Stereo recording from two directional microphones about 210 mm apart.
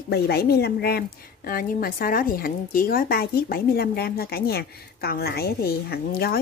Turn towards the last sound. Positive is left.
turn(degrees=45)  # may be behind; listen again after turning